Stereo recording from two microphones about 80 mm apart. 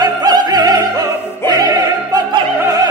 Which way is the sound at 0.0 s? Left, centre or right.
Right.